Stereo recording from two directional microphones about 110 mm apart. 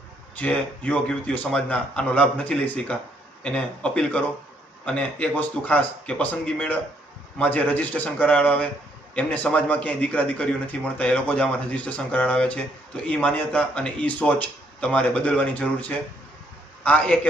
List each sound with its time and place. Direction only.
0.3 s speech: 15° left (ahead or behind)